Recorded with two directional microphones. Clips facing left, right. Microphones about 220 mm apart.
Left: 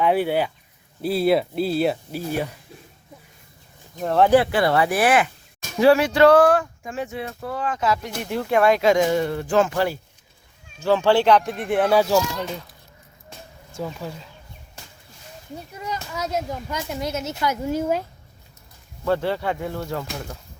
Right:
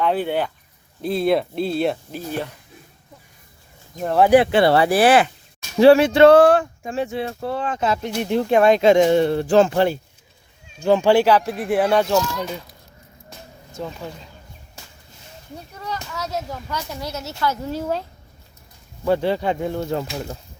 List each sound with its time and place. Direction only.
0.0 s speech: 10° left (ahead or behind)
4.0 s speech: 5° right (ahead or behind)
4.3 s speech: 15° right (ahead or behind)
4.6 s speech: 30° right (ahead or behind)
10.8 s speech: 15° right (ahead or behind)
13.7 s speech: 5° left (ahead or behind)
15.7 s speech: 15° left (ahead or behind)
19.0 s speech: 15° right (ahead or behind)